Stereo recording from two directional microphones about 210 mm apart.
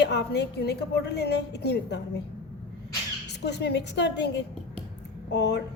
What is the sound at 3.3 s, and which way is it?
A woman's voice, 55° left (ahead or behind).